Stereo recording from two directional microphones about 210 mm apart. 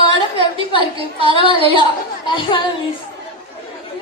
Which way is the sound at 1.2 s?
25° right (ahead or behind).